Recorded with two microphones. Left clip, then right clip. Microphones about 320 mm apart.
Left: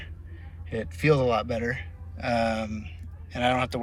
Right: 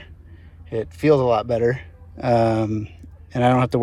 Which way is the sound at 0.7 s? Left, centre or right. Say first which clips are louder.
Right 6 dB; centre.